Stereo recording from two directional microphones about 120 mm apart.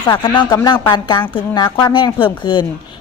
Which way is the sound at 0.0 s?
45° left (ahead or behind).